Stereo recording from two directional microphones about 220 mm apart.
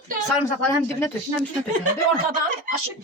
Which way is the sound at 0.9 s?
10° left (ahead or behind).